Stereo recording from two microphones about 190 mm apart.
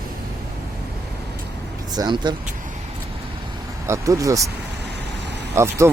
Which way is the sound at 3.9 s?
15° right (ahead or behind).